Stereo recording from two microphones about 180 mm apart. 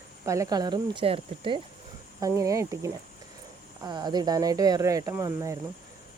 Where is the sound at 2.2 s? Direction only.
15° right (ahead or behind).